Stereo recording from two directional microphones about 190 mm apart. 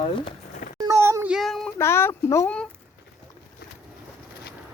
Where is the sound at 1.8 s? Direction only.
15° left (ahead or behind).